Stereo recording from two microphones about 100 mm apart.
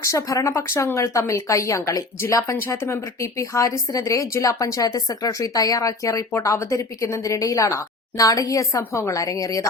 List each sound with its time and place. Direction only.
0.0 s speech: 30° left (ahead or behind)